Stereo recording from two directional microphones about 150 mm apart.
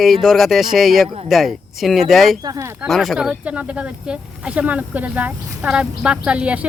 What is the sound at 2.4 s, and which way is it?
Speech, 25° right (ahead or behind).